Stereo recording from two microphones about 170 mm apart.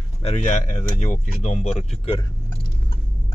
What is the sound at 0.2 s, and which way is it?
Speech, 35° left (ahead or behind).